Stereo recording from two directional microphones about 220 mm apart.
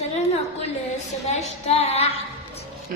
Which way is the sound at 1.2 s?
30° left (ahead or behind).